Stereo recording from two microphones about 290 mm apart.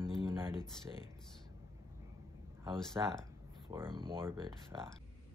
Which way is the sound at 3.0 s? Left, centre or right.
Centre.